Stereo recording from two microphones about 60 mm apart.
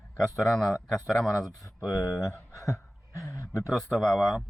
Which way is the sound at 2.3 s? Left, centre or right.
Left.